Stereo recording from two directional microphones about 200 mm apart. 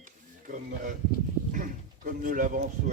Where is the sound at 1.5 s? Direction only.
40° right (ahead or behind).